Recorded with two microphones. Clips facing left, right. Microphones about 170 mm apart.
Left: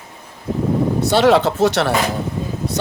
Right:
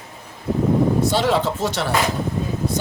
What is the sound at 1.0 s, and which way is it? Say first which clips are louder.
Speech: left 5 dB; 70° left (ahead or behind).